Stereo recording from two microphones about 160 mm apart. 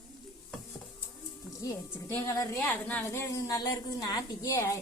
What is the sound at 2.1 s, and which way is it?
A woman's voice, 15° left (ahead or behind).